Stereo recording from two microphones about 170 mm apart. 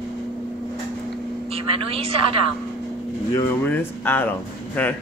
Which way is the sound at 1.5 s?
35° right (ahead or behind).